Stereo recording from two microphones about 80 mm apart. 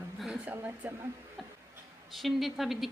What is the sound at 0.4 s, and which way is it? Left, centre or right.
Speech, centre.